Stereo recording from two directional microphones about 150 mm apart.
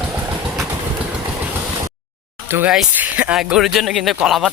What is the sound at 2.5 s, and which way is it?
Speech, 10° right (ahead or behind).